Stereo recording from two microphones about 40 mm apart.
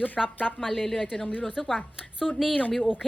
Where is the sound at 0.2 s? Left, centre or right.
Centre.